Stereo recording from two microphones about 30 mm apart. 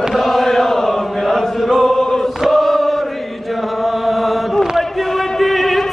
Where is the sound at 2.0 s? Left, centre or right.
Left.